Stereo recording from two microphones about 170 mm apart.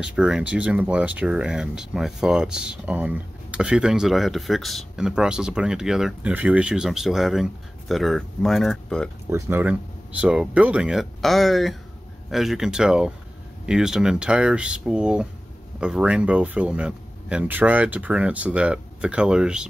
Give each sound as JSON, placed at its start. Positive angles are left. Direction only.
{"t": 0.0, "sound": "speech", "side_deg": -5}
{"t": 9.3, "sound": "speech", "side_deg": -10}